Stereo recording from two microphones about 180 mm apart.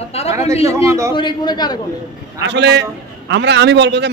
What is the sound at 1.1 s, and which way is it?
Speech, 25° left (ahead or behind).